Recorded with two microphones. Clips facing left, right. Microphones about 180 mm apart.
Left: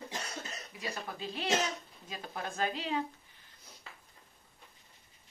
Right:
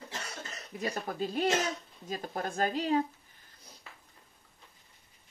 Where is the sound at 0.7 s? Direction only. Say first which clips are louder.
Right 7 dB; 45° right (ahead or behind).